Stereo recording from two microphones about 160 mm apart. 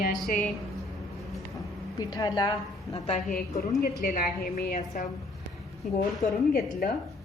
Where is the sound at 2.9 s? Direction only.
45° left (ahead or behind).